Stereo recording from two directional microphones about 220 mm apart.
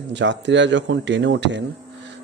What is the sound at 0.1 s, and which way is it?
Speech, 55° right (ahead or behind).